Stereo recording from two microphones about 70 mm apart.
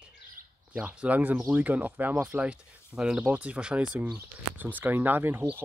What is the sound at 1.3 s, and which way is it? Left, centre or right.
Speech, right.